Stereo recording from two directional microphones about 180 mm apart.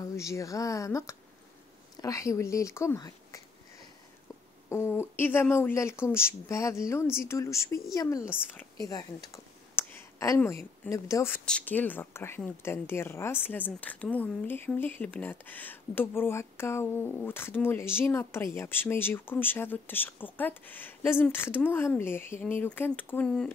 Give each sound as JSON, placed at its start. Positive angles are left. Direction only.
{"t": 0.0, "sound": "a woman's voice", "side_deg": 15}
{"t": 4.6, "sound": "a woman's voice", "side_deg": 15}